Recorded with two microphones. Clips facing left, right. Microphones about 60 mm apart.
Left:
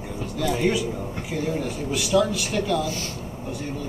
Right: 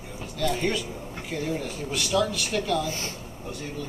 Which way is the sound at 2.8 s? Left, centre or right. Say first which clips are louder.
Left 2 dB; right.